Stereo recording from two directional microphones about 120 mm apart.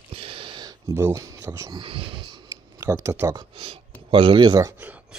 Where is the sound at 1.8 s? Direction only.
45° right (ahead or behind).